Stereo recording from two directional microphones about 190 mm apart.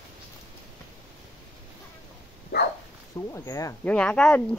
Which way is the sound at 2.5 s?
55° left (ahead or behind).